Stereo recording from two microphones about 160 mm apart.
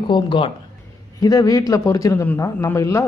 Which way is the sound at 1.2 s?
20° left (ahead or behind).